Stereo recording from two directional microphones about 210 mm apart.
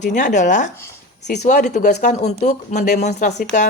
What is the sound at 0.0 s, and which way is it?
A woman's voice, 35° left (ahead or behind).